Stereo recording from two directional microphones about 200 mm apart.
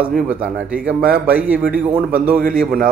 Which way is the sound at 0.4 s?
5° right (ahead or behind).